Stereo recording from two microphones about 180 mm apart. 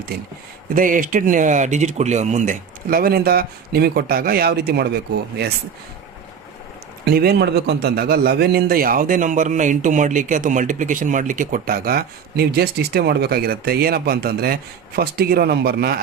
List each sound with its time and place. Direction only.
0.7 s speech: 50° right (ahead or behind)
7.0 s a man's voice: 60° right (ahead or behind)